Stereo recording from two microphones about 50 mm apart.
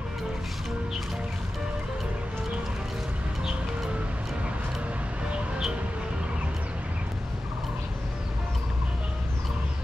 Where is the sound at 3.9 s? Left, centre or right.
Right.